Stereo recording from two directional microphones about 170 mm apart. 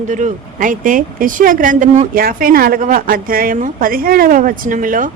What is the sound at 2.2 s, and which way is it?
A woman's voice, 60° right (ahead or behind).